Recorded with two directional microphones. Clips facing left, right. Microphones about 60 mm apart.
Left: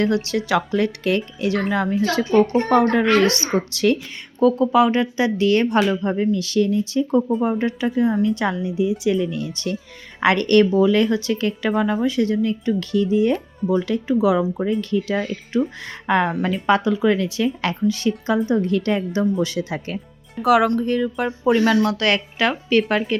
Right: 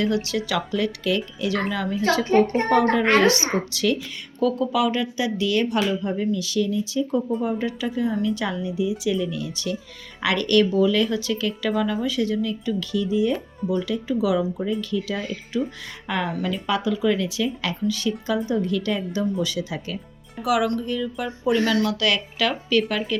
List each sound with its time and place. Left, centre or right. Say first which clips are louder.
0.0 s speech: left 3 dB; left
2.3 s a woman's voice: left 3 dB; right
3.7 s speech: left 4 dB; left